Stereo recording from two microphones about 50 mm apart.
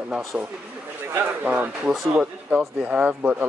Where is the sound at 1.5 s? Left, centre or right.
Right.